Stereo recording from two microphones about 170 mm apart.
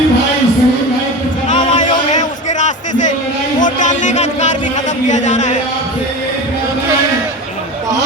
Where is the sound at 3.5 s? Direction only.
50° left (ahead or behind).